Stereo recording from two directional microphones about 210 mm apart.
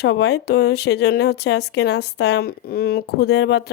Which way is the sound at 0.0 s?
55° left (ahead or behind).